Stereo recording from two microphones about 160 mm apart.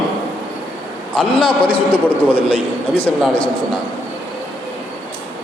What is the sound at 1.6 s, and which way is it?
A man's voice, 10° left (ahead or behind).